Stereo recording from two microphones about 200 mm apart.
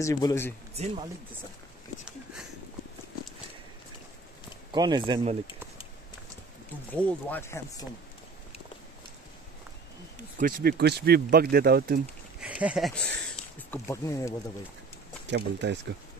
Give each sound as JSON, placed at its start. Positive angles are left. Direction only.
{"t": 0.0, "sound": "speech", "side_deg": 15}
{"t": 4.7, "sound": "speech", "side_deg": -20}
{"t": 6.9, "sound": "speech", "side_deg": 10}
{"t": 10.3, "sound": "speech", "side_deg": -45}
{"t": 12.4, "sound": "speech", "side_deg": -5}
{"t": 15.2, "sound": "speech", "side_deg": -60}